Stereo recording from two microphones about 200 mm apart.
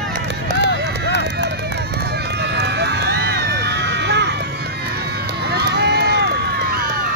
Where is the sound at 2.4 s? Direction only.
55° right (ahead or behind).